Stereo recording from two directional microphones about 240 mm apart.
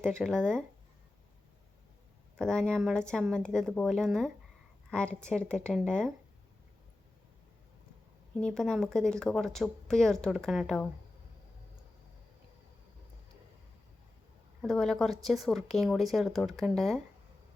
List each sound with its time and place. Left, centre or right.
0.0 s a woman's voice: centre
2.3 s a woman's voice: centre
8.4 s a woman's voice: centre
14.6 s a woman's voice: centre